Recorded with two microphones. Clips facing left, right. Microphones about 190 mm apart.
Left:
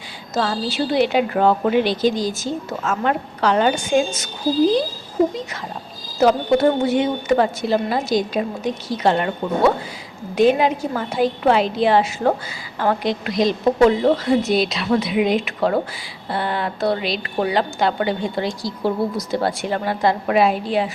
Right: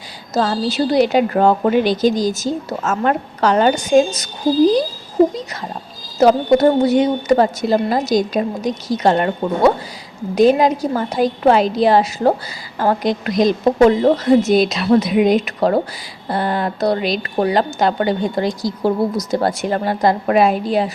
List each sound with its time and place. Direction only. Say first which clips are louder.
0.3 s a woman's voice: right 4 dB; 40° right (ahead or behind)
6.1 s a woman's voice: right 4 dB; 40° right (ahead or behind)
10.3 s a woman's voice: right 3 dB; 40° right (ahead or behind)